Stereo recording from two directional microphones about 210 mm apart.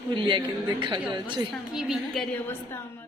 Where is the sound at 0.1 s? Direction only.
25° right (ahead or behind).